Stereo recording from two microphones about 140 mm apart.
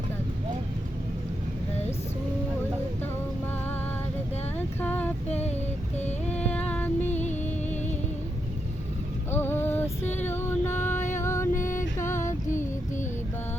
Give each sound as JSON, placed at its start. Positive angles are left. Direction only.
{"t": 4.5, "sound": "a sound", "side_deg": 15}
{"t": 5.3, "sound": "child singing", "side_deg": 50}
{"t": 6.2, "sound": "music", "side_deg": 10}
{"t": 7.1, "sound": "music", "side_deg": 55}
{"t": 9.3, "sound": "music", "side_deg": 15}
{"t": 10.9, "sound": "music", "side_deg": 60}
{"t": 11.2, "sound": "music", "side_deg": 20}